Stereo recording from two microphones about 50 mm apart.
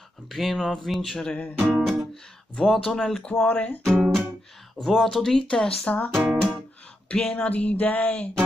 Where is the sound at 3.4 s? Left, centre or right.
Left.